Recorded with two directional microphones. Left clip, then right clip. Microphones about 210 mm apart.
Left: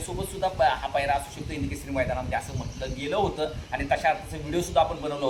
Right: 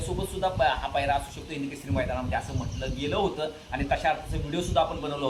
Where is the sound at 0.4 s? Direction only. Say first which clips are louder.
Left 2 dB; 10° left (ahead or behind).